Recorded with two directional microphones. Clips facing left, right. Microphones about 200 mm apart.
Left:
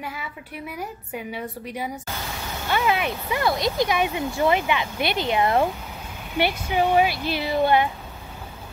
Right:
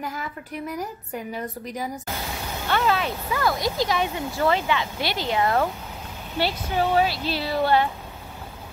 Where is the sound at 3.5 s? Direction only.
65° left (ahead or behind).